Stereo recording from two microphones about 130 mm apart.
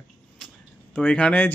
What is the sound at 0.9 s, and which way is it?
Speech, 10° left (ahead or behind).